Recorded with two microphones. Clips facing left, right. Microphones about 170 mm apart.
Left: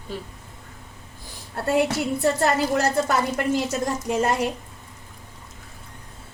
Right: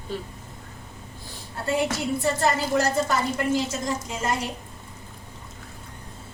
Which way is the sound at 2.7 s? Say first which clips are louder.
Left 1 dB; 60° left (ahead or behind).